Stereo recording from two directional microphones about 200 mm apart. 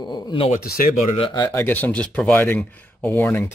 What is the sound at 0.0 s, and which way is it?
Speech, 25° left (ahead or behind).